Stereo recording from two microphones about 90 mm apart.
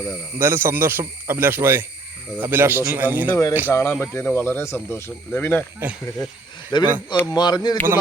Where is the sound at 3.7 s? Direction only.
30° left (ahead or behind).